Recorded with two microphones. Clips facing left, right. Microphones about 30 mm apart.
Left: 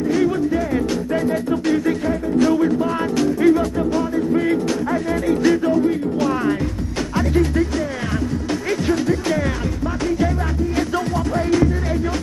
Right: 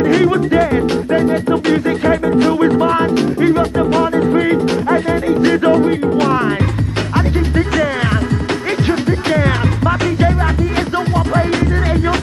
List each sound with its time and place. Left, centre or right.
0.0 s music: right
0.7 s music: right
2.0 s music: right
3.9 s music: right
4.3 s music: right
8.8 s music: right